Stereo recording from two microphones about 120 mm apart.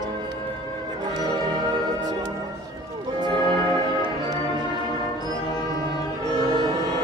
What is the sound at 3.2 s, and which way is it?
Music, 40° right (ahead or behind).